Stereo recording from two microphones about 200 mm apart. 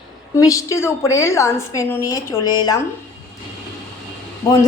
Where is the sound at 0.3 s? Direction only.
15° left (ahead or behind).